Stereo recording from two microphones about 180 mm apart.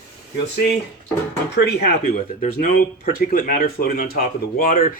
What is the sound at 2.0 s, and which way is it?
Speech, 45° left (ahead or behind).